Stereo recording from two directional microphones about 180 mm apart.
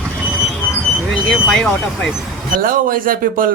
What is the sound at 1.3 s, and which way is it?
Speech, 5° left (ahead or behind).